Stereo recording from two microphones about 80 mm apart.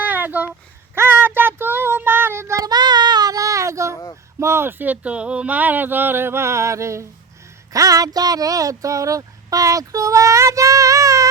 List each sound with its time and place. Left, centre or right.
0.0 s a sound: right
0.9 s child singing: right
2.6 s child singing: right
4.4 s speech: right